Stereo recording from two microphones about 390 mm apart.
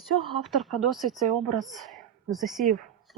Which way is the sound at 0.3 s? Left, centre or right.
Centre.